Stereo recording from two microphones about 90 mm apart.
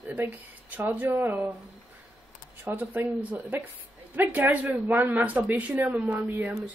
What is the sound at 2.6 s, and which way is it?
A woman's voice, 25° right (ahead or behind).